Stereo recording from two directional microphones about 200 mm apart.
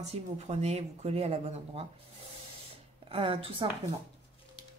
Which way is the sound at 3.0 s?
30° right (ahead or behind).